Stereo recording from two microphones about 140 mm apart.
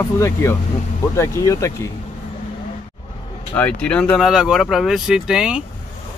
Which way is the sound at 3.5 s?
10° left (ahead or behind).